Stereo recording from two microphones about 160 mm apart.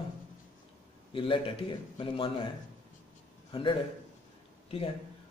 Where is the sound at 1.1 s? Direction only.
30° left (ahead or behind).